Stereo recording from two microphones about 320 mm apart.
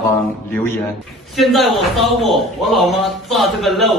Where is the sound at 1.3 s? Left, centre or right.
Centre.